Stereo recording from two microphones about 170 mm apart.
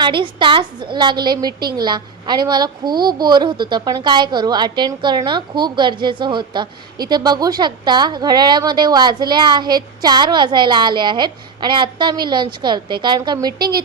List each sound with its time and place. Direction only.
0.0 s a woman's voice: 30° right (ahead or behind)